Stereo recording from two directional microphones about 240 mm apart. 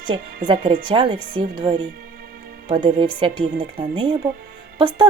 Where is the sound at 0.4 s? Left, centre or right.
Right.